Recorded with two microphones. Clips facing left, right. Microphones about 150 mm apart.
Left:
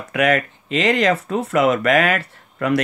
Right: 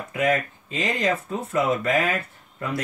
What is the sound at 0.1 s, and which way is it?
Speech, 80° left.